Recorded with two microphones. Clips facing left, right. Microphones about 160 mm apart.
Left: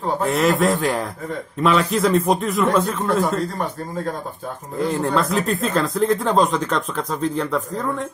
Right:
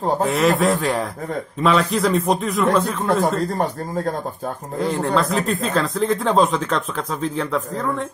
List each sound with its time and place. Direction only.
0.3 s speech: centre (ahead or behind)
3.1 s speech: 35° right (ahead or behind)
4.7 s speech: centre (ahead or behind)